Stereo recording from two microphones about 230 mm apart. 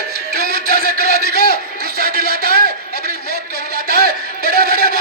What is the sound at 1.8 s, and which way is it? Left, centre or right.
Speech, right.